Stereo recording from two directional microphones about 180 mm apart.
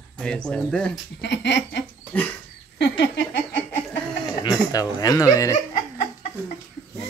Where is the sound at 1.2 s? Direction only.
75° left (ahead or behind).